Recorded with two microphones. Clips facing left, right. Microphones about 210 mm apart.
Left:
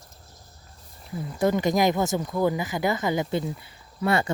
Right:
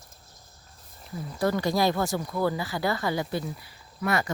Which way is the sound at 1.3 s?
20° left (ahead or behind).